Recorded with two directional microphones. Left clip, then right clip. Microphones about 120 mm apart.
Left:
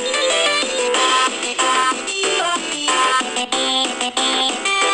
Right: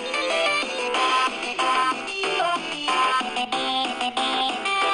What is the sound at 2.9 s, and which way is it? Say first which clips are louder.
Music: left 5 dB; 30° left (ahead or behind).